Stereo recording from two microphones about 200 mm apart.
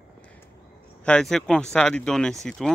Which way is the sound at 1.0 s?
5° left (ahead or behind).